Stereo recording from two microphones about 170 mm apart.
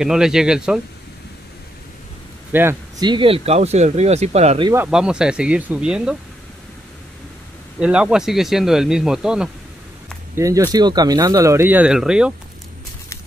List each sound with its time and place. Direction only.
0.0 s speech: 5° right (ahead or behind)
2.5 s speech: 10° right (ahead or behind)
3.0 s speech: 30° right (ahead or behind)
4.8 s speech: 5° right (ahead or behind)
7.8 s speech: 5° right (ahead or behind)
10.3 s speech: 15° right (ahead or behind)